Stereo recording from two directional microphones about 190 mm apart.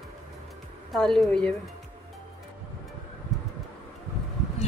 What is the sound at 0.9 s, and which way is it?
Speech, centre (ahead or behind).